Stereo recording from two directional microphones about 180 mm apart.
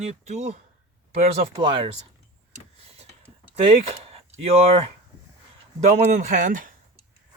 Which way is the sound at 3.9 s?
35° right (ahead or behind).